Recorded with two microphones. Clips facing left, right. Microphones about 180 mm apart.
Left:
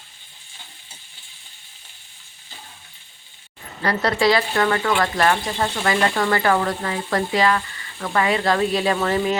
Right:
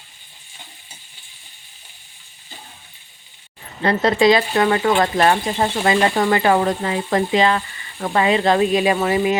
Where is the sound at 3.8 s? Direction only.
20° right (ahead or behind).